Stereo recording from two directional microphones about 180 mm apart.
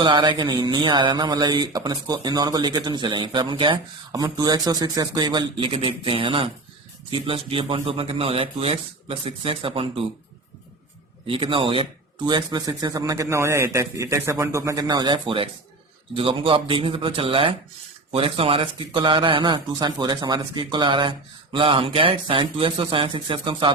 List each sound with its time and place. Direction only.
0.0 s a man's voice: 25° right (ahead or behind)
11.3 s a man's voice: 30° right (ahead or behind)